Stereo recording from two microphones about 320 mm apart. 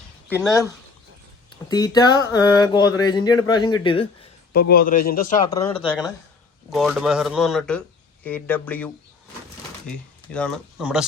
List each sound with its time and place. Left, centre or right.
0.3 s speech: centre
1.7 s speech: centre
4.7 s a man's voice: left
5.5 s speech: centre
6.7 s speech: centre